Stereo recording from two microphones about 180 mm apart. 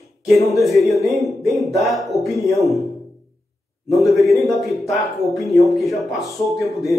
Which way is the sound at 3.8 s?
Centre (ahead or behind).